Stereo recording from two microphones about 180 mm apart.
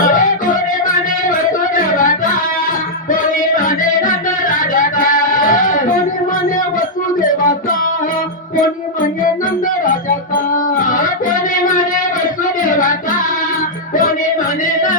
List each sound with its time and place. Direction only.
0.0 s music: 50° left (ahead or behind)
1.5 s a sound: 50° left (ahead or behind)
3.1 s music: 50° left (ahead or behind)
7.2 s music: 50° left (ahead or behind)
10.5 s music: 50° left (ahead or behind)
14.6 s music: 45° left (ahead or behind)